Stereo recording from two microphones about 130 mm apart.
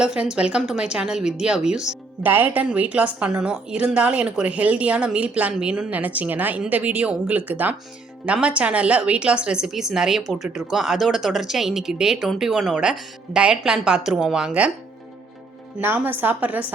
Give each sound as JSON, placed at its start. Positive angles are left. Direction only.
{"t": 0.0, "sound": "a woman's voice", "side_deg": -5}
{"t": 15.8, "sound": "a woman's voice", "side_deg": -15}